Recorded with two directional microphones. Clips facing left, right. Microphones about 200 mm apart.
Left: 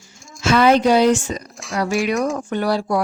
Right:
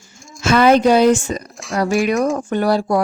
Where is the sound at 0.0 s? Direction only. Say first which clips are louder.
Right 2 dB; centre (ahead or behind).